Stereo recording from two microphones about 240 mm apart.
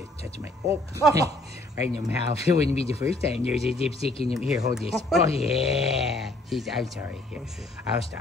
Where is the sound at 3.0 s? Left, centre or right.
Left.